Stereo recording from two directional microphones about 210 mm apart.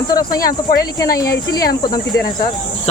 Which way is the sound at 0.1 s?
20° left (ahead or behind).